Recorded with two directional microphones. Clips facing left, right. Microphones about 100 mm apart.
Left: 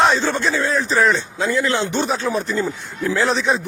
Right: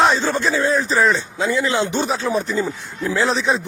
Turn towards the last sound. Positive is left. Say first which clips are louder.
# even
turn(degrees=0)  # may be behind; listen again after turning